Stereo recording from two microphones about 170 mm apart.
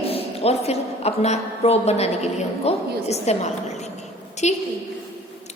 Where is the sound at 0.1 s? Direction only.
35° left (ahead or behind).